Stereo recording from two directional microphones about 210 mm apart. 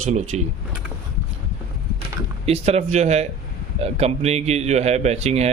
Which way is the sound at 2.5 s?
30° right (ahead or behind).